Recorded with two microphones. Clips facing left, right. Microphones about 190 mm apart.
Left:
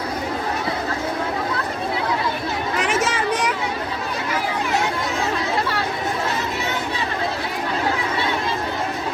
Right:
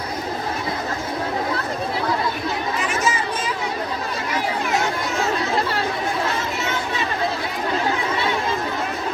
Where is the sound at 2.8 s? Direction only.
90° left.